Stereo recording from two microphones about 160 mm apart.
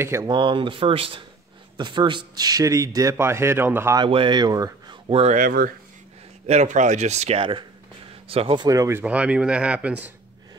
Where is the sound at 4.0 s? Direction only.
30° right (ahead or behind).